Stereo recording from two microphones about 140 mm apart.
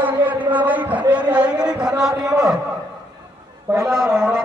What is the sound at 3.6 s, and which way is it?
Speech, 15° right (ahead or behind).